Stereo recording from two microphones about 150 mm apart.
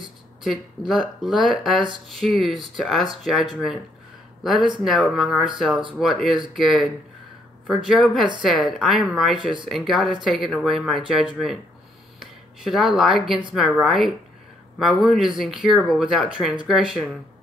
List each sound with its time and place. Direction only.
0.4 s speech: centre (ahead or behind)
9.4 s speech: 35° right (ahead or behind)
9.7 s speech: centre (ahead or behind)